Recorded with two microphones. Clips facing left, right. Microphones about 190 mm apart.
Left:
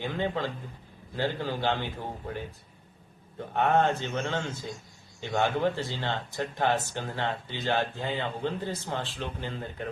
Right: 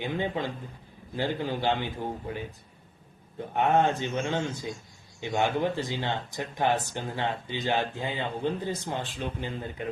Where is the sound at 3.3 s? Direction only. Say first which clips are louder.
Right 1 dB; 15° right (ahead or behind).